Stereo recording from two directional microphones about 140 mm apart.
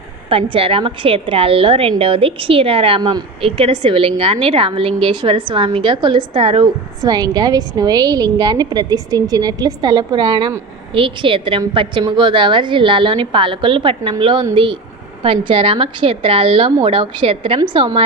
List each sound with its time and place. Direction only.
0.3 s a woman's voice: 40° right (ahead or behind)
7.0 s a woman's voice: 30° right (ahead or behind)